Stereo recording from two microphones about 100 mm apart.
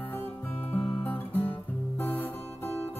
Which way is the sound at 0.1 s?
20° left (ahead or behind).